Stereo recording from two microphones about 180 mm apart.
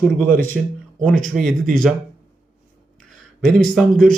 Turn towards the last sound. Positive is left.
turn(degrees=5)  # may be behind; listen again after turning